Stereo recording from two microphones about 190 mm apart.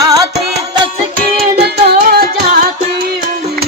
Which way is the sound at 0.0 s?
20° right (ahead or behind).